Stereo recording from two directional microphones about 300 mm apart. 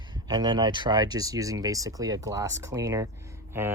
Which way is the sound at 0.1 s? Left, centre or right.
Centre.